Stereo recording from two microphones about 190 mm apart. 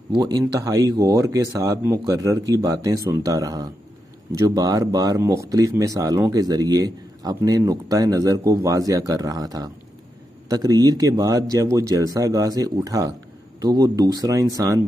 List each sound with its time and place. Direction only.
0.1 s speech: 20° right (ahead or behind)